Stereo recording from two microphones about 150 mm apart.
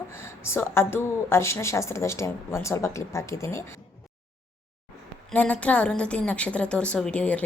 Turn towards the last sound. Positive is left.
turn(degrees=10)  # may be behind; listen again after turning